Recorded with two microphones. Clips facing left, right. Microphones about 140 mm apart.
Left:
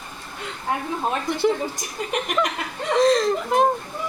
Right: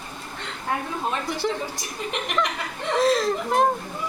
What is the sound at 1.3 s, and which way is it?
Speech, centre (ahead or behind).